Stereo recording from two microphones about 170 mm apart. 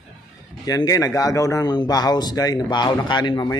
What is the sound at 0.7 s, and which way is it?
Speech, 20° left (ahead or behind).